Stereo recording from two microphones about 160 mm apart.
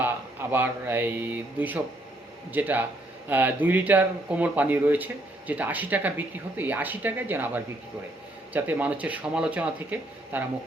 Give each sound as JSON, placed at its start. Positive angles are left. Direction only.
{"t": 0.0, "sound": "speech", "side_deg": -10}